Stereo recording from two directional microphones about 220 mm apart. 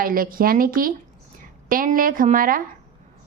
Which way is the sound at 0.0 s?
40° right (ahead or behind).